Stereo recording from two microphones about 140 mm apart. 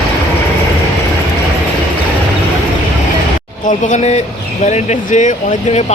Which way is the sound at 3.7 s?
60° left (ahead or behind).